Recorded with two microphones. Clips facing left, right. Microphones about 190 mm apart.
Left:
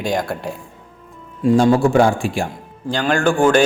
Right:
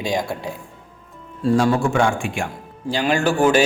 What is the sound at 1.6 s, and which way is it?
Speech, 30° left (ahead or behind).